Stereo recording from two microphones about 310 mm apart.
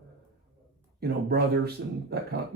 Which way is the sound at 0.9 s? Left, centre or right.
Right.